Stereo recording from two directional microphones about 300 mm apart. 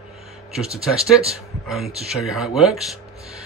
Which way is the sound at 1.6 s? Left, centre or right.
Centre.